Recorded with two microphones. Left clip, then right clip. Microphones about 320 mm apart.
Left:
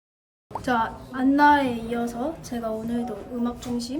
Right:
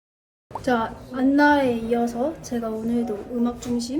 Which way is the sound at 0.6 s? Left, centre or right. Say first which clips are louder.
Right 1 dB; centre.